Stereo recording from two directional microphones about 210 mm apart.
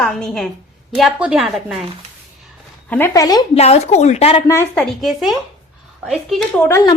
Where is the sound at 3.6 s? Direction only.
30° left (ahead or behind).